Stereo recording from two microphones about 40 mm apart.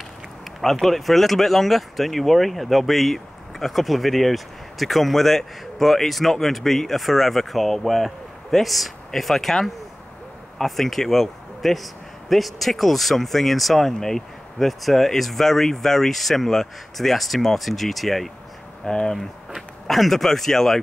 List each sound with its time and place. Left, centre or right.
0.6 s a man's voice: centre
18.9 s speech: centre
19.1 s speech: centre